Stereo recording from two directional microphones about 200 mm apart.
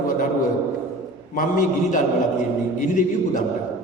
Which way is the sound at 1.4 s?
40° left (ahead or behind).